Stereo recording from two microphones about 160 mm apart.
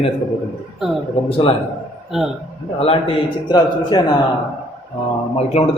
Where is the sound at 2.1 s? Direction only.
Centre (ahead or behind).